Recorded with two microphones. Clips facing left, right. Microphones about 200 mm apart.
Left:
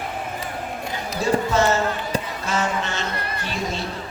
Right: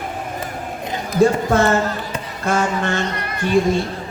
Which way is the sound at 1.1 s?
55° right (ahead or behind).